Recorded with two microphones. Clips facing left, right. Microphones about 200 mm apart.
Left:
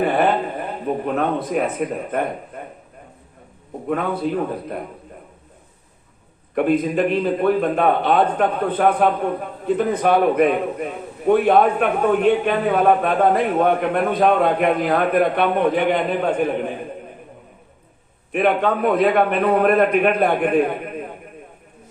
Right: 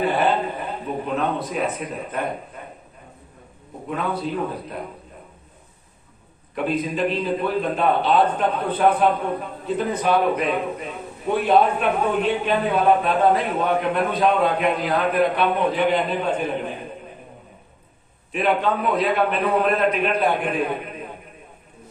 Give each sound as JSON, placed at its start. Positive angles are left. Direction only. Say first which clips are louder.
{"t": 0.0, "sound": "a sound", "louder": "left 2 dB", "side_deg": 55}
{"t": 3.8, "sound": "a man's voice", "louder": "left 4 dB", "side_deg": 55}
{"t": 6.5, "sound": "a man's voice", "louder": "left 6 dB", "side_deg": 55}
{"t": 18.3, "sound": "a man's voice", "louder": "left 3 dB", "side_deg": 55}